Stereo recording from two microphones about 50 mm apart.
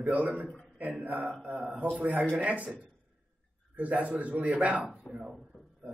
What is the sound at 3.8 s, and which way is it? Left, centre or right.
A man's voice, right.